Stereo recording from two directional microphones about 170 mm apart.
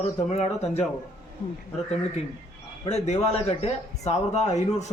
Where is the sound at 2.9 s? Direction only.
40° left (ahead or behind).